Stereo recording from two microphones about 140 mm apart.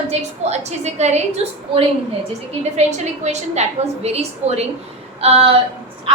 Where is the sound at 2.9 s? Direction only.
55° right (ahead or behind).